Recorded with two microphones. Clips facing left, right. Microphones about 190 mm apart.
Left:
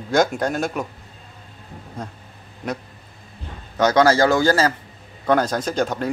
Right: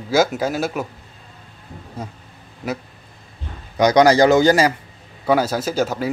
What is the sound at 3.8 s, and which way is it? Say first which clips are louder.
A man's voice: right 3 dB; 15° right (ahead or behind).